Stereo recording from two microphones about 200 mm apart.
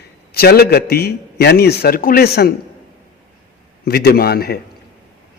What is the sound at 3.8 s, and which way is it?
Speech, 50° left (ahead or behind).